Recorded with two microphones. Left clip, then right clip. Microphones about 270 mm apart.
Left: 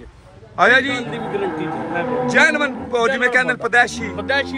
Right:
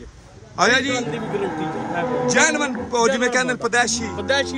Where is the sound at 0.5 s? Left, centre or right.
Centre.